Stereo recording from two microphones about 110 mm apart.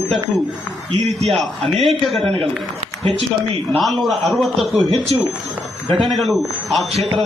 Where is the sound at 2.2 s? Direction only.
60° right (ahead or behind).